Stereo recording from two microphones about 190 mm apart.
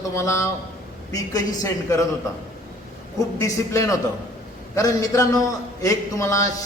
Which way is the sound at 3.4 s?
15° left (ahead or behind).